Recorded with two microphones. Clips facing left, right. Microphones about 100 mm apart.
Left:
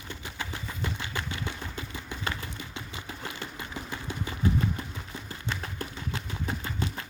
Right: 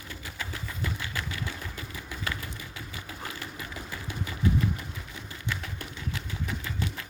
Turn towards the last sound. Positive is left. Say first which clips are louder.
# left 1 dB
turn(degrees=35)  # may be behind; listen again after turning